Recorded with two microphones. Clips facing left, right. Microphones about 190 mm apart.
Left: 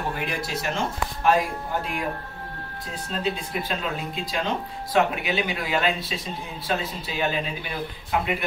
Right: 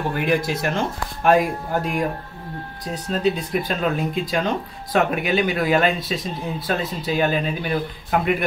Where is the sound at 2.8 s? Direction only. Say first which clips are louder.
Right 7 dB; 45° right (ahead or behind).